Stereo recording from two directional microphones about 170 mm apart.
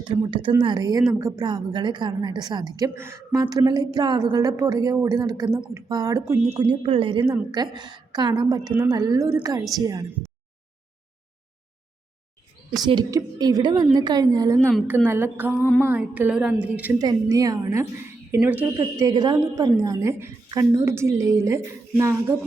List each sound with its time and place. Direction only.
0.0 s a woman's voice: 30° right (ahead or behind)
6.5 s a woman's voice: 35° right (ahead or behind)
12.8 s a woman's voice: 25° right (ahead or behind); by 17.0 s 10° right (ahead or behind)
17.0 s a woman's voice: 20° right (ahead or behind)